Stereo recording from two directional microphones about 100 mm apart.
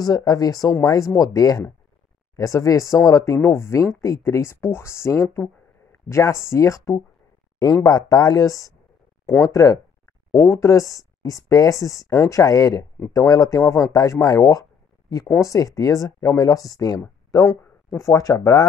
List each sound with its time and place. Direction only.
0.0 s speech: 40° left (ahead or behind)